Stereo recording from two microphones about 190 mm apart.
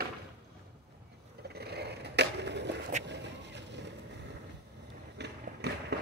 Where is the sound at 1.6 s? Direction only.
60° right (ahead or behind).